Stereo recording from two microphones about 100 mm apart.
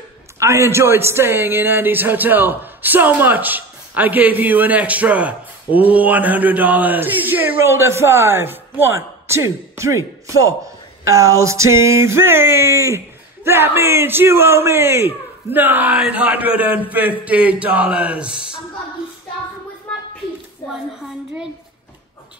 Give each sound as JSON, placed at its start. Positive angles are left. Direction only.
{"t": 0.4, "sound": "a man's voice", "side_deg": -25}